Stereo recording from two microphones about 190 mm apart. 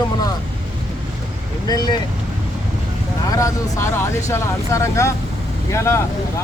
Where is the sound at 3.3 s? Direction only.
15° left (ahead or behind).